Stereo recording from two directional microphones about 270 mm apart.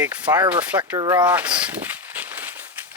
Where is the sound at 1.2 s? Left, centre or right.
Centre.